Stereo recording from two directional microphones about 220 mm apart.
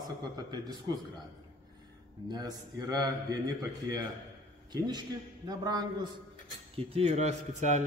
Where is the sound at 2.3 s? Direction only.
15° right (ahead or behind).